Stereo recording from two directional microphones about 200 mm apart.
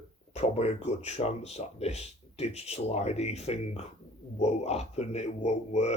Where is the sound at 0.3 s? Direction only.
30° left (ahead or behind).